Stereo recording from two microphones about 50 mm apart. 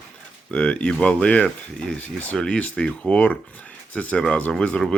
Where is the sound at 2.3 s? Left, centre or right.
Centre.